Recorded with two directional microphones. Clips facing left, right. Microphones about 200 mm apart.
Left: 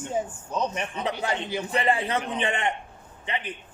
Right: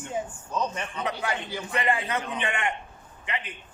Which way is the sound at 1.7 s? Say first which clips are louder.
Left 2 dB; 30° left (ahead or behind).